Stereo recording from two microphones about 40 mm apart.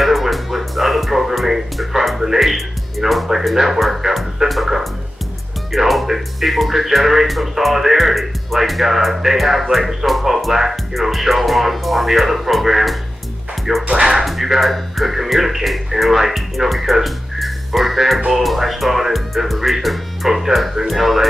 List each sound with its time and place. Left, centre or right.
0.0 s music: centre
5.7 s speech: centre
13.8 s speech: centre
14.1 s speech: centre